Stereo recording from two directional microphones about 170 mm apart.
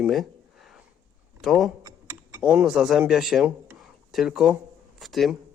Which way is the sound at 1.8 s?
25° right (ahead or behind).